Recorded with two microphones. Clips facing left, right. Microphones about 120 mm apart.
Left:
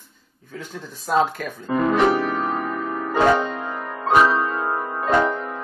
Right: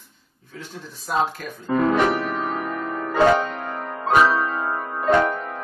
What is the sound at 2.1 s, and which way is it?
Music, centre (ahead or behind).